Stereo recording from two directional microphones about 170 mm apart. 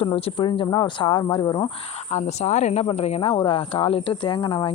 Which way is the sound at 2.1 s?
40° left (ahead or behind).